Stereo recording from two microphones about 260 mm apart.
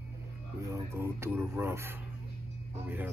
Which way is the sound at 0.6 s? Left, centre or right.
Centre.